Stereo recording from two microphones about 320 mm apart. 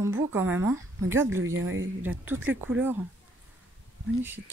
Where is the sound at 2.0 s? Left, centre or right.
Centre.